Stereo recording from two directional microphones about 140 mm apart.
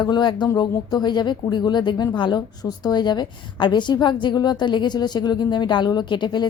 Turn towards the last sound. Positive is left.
turn(degrees=35)  # may be behind; listen again after turning